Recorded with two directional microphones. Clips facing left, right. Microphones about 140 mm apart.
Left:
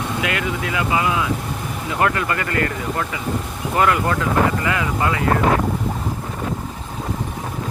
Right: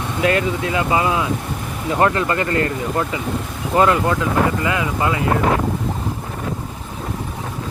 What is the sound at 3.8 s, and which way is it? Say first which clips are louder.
Speech: right 3 dB; 25° right (ahead or behind).